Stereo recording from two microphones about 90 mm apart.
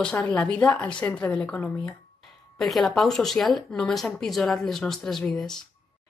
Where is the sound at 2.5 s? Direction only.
Centre (ahead or behind).